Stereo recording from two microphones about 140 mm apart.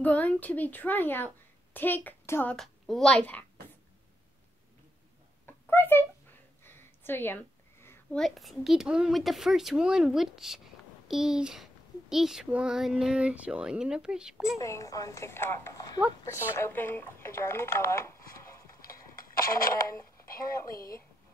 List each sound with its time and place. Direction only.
0.0 s a woman's voice: 10° left (ahead or behind)
2.5 s a child's voice: centre (ahead or behind)
5.7 s a woman's voice: 15° left (ahead or behind)
6.6 s a sound: 15° left (ahead or behind)
8.1 s a child's voice: centre (ahead or behind)
14.6 s a woman's voice: 20° left (ahead or behind)
18.8 s a sound: 90° left
19.9 s speech: 20° left (ahead or behind)
20.7 s speech: 90° left